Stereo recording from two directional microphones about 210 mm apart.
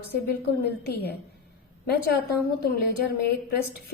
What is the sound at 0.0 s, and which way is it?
A woman's voice, 50° left (ahead or behind).